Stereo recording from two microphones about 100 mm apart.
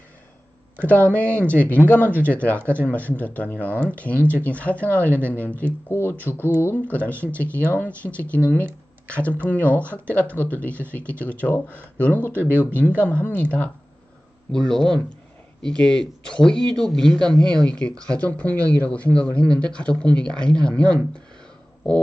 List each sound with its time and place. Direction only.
1.3 s speech: 15° left (ahead or behind)
2.0 s speech: 20° right (ahead or behind)
2.3 s speech: 15° left (ahead or behind)
14.5 s speech: 5° left (ahead or behind)